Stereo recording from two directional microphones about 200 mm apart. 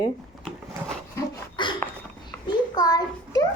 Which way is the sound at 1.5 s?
25° left (ahead or behind).